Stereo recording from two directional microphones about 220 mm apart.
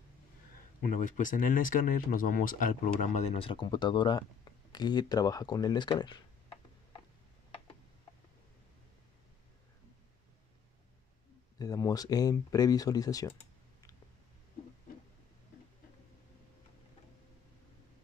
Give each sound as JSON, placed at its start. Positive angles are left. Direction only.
{"t": 0.8, "sound": "speech", "side_deg": 35}
{"t": 11.5, "sound": "speech", "side_deg": 15}